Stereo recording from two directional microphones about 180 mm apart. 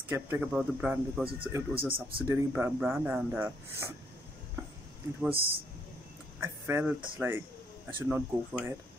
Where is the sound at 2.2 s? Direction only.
15° right (ahead or behind).